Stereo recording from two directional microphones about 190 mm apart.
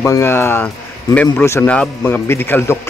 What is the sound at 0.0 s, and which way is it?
A man's voice, 15° left (ahead or behind).